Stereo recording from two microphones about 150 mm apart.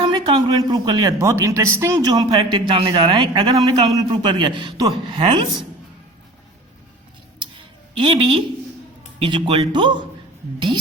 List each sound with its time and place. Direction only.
0.0 s speech: 30° right (ahead or behind)
7.9 s a man's voice: 35° right (ahead or behind)